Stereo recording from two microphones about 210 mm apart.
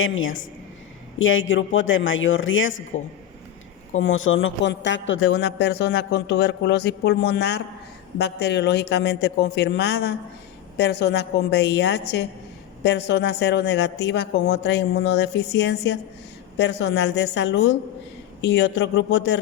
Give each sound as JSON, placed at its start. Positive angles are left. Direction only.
{"t": 0.0, "sound": "a man's voice", "side_deg": 70}
{"t": 4.0, "sound": "a man's voice", "side_deg": 70}